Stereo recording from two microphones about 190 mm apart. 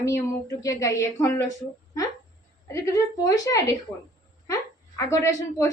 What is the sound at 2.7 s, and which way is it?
A woman's voice, 15° left (ahead or behind).